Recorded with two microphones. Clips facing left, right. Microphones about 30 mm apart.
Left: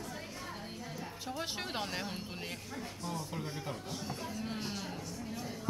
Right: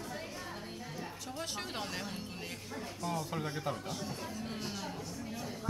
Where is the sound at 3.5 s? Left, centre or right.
Centre.